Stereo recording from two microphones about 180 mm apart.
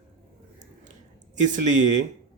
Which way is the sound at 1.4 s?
45° right (ahead or behind).